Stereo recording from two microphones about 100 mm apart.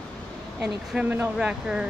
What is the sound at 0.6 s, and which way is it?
Speech, 15° right (ahead or behind).